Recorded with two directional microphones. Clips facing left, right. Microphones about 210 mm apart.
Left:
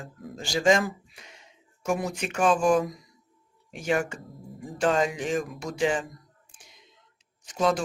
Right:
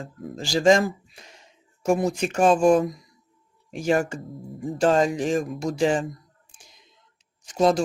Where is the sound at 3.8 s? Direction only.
40° right (ahead or behind).